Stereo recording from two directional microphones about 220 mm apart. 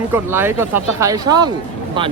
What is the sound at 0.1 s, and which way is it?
Speech, 10° right (ahead or behind).